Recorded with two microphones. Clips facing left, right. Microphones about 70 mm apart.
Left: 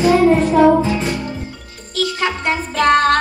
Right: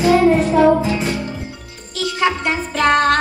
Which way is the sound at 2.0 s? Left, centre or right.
Left.